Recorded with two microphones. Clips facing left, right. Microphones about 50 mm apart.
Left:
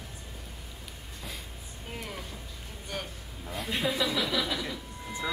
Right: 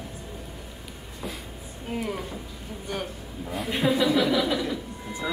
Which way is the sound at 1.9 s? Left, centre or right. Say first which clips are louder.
Right 9 dB; centre.